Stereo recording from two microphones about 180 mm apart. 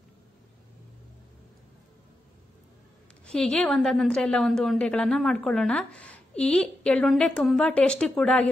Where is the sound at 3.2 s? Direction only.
5° left (ahead or behind).